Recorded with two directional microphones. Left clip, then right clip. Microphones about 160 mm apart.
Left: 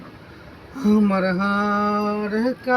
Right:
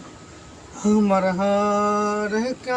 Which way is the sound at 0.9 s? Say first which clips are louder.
Right 1 dB; 15° right (ahead or behind).